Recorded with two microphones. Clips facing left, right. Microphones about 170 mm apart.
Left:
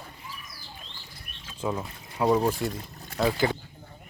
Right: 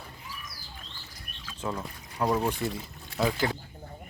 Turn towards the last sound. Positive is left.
turn(degrees=0)  # may be behind; listen again after turning